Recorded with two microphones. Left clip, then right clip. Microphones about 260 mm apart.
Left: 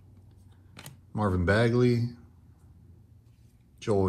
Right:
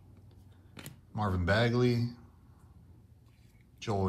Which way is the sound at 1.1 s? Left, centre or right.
Centre.